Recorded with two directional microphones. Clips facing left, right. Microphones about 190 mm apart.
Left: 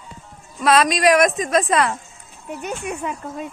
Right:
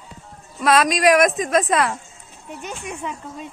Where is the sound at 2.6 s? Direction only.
55° left (ahead or behind).